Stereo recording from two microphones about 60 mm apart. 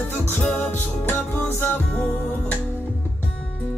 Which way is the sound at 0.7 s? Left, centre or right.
Left.